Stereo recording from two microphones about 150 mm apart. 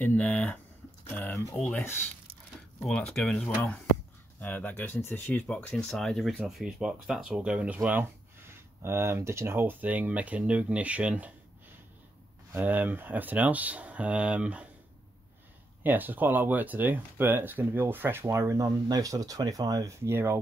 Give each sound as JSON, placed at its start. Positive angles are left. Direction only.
{"t": 0.0, "sound": "speech", "side_deg": 10}
{"t": 12.5, "sound": "speech", "side_deg": -10}
{"t": 15.8, "sound": "speech", "side_deg": -10}